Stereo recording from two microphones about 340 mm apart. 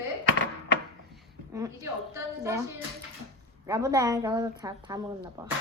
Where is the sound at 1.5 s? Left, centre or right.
Centre.